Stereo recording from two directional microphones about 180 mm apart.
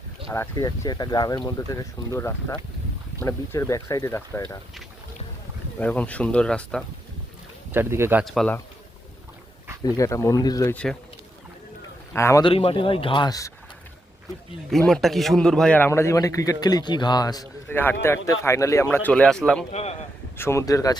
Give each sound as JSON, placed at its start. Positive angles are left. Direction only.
{"t": 0.3, "sound": "a man's voice", "side_deg": 15}
{"t": 5.8, "sound": "a man's voice", "side_deg": 10}
{"t": 7.7, "sound": "speech", "side_deg": -15}
{"t": 8.2, "sound": "speech", "side_deg": 0}
{"t": 9.8, "sound": "a man's voice", "side_deg": 15}
{"t": 12.1, "sound": "a man's voice", "side_deg": 15}
{"t": 12.5, "sound": "speech", "side_deg": 30}
{"t": 14.7, "sound": "a man's voice", "side_deg": 5}
{"t": 19.7, "sound": "a man's voice", "side_deg": 35}
{"t": 20.3, "sound": "a man's voice", "side_deg": 15}